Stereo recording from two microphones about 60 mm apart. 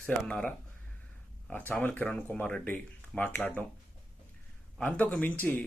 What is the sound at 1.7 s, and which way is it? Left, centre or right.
Speech, left.